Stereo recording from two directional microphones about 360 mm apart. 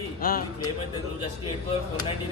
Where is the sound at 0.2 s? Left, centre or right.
Left.